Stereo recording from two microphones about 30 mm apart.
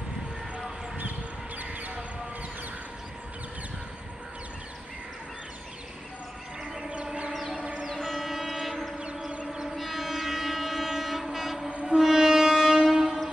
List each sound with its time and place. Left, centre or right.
1.6 s a sound: right
6.8 s music: right
8.0 s train: centre
11.8 s train: right